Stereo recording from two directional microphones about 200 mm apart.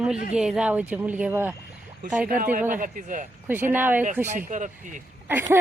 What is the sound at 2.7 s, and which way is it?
Speech, 40° right (ahead or behind).